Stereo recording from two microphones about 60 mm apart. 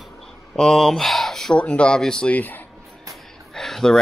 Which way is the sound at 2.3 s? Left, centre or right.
Left.